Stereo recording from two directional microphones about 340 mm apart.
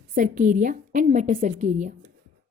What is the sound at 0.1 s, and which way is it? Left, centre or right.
A woman's voice, right.